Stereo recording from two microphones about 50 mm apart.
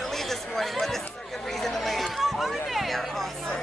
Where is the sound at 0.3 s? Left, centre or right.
Centre.